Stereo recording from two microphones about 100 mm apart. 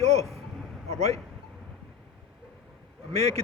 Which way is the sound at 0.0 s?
90° right.